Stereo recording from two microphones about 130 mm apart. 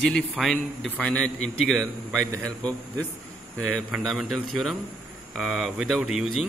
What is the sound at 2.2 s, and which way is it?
Speech, 25° right (ahead or behind).